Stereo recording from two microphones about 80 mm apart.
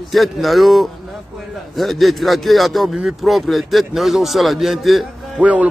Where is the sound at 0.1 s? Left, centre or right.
Centre.